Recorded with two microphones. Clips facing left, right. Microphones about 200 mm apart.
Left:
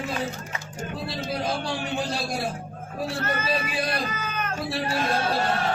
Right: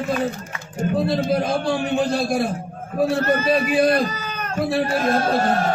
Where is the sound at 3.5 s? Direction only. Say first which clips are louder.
Right 10 dB; 50° right (ahead or behind).